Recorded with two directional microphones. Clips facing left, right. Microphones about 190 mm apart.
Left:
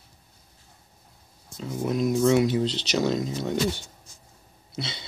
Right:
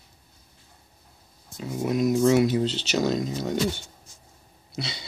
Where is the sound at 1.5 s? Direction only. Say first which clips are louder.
Right 1 dB; 5° right (ahead or behind).